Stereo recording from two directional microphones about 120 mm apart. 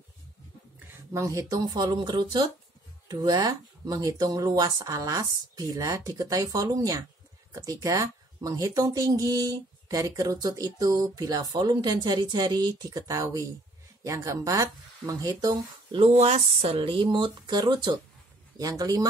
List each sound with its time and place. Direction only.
1.1 s speech: 25° right (ahead or behind)
16.0 s speech: 60° right (ahead or behind); by 19.0 s 30° right (ahead or behind)